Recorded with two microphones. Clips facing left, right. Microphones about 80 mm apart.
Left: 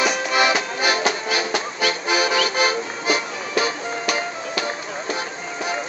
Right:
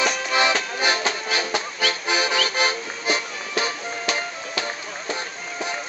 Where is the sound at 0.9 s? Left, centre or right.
Centre.